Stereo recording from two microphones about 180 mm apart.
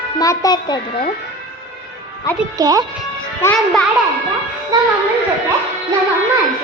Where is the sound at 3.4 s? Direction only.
10° left (ahead or behind).